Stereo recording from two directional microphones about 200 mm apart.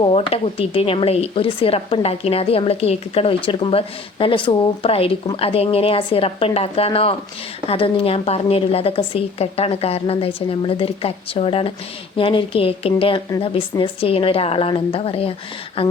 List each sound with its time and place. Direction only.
0.0 s speech: 30° left (ahead or behind)